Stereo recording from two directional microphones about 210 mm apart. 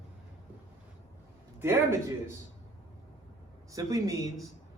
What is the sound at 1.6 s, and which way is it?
Speech, 10° right (ahead or behind).